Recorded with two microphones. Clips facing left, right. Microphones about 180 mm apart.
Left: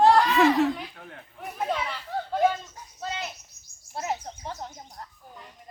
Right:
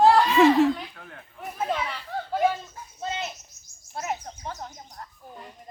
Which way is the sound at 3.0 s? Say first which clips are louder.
Right 2 dB; 20° right (ahead or behind).